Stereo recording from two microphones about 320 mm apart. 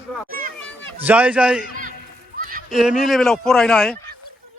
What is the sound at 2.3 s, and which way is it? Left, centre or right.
Horse, right.